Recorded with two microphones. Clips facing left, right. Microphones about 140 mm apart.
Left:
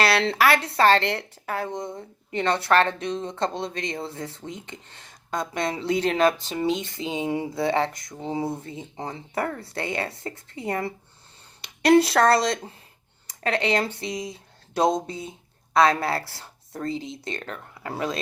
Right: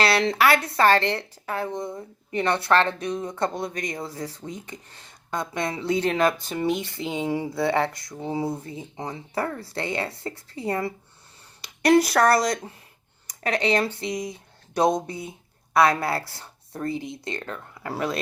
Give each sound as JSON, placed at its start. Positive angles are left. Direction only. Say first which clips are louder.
{"t": 0.0, "sound": "a sound", "louder": "even", "side_deg": -25}
{"t": 0.5, "sound": "speech", "louder": "even", "side_deg": 25}
{"t": 1.2, "sound": "a woman's voice", "louder": "even", "side_deg": -25}
{"t": 1.6, "sound": "speech", "louder": "right 1 dB", "side_deg": 20}
{"t": 16.2, "sound": "speech", "louder": "even", "side_deg": -20}
{"t": 16.8, "sound": "speech", "louder": "right 1 dB", "side_deg": 20}